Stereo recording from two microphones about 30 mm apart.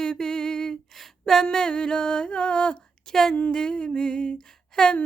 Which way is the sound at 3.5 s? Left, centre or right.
Left.